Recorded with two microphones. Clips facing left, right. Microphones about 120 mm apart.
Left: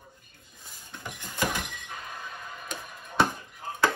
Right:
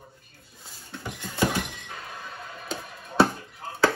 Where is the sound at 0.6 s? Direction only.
15° left (ahead or behind).